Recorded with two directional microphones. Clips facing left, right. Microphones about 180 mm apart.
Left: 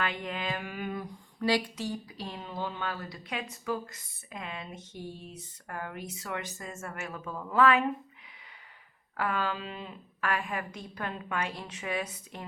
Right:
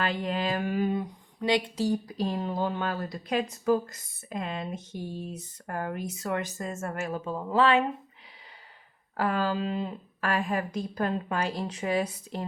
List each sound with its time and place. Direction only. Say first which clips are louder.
0.0 s a sound: right 5 dB; 35° right (ahead or behind)
1.7 s a woman's voice: right 8 dB; 40° right (ahead or behind)
9.1 s a woman's voice: right 5 dB; 35° right (ahead or behind)